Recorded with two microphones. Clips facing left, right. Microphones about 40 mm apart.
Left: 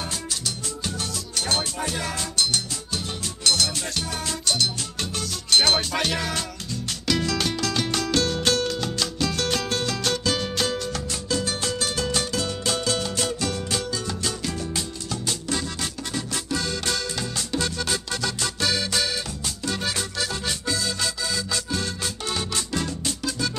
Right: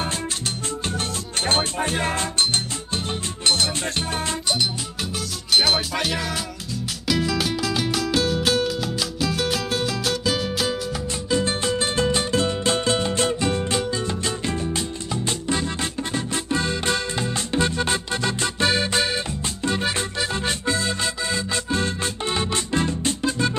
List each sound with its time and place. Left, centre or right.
0.8 s music: right
5.5 s music: centre
11.3 s music: right